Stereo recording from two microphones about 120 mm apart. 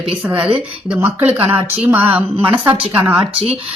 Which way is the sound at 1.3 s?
55° right (ahead or behind).